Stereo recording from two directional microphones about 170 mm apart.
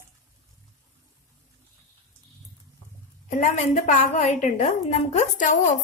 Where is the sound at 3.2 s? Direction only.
45° left (ahead or behind).